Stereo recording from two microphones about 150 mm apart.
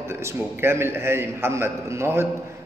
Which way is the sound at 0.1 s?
15° right (ahead or behind).